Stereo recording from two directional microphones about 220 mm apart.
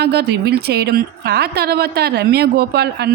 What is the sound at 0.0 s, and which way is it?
Speech, 50° right (ahead or behind).